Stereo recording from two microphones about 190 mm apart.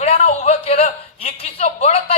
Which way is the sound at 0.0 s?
35° left (ahead or behind).